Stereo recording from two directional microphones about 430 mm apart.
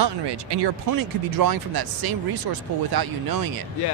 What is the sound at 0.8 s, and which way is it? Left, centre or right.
Speech, right.